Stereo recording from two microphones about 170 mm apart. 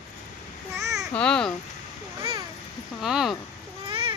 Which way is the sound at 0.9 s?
5° left (ahead or behind).